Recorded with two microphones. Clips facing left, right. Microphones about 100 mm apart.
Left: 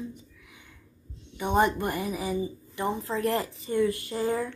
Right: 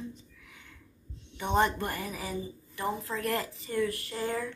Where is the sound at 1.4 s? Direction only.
15° left (ahead or behind).